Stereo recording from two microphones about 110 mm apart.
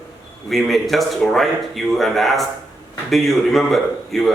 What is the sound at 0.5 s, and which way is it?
Speech, centre (ahead or behind).